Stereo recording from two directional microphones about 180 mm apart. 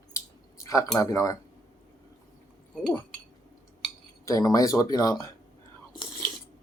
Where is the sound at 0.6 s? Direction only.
20° left (ahead or behind).